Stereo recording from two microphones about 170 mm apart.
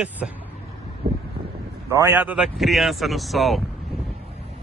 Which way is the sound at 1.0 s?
65° right (ahead or behind).